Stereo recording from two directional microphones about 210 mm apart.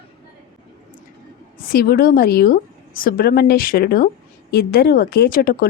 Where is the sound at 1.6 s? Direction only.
45° left (ahead or behind).